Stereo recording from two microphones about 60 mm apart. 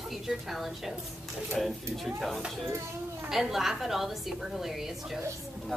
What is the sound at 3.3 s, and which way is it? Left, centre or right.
A woman's voice, centre.